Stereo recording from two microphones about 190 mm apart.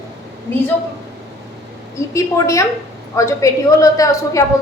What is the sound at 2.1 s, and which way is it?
A woman's voice, 15° left (ahead or behind).